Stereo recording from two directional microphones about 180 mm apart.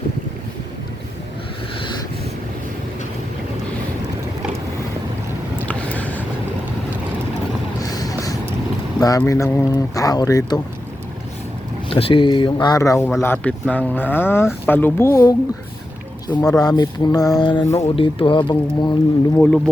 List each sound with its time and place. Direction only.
5.6 s a sound: 10° left (ahead or behind)
7.8 s a sound: 20° left (ahead or behind)
9.0 s speech: 20° left (ahead or behind)
11.9 s speech: 30° left (ahead or behind)
17.8 s speech: 30° left (ahead or behind)
19.4 s speech: 5° left (ahead or behind)